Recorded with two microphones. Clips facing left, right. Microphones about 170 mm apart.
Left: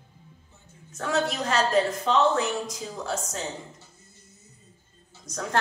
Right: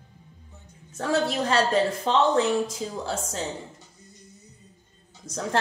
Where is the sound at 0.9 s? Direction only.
30° right (ahead or behind).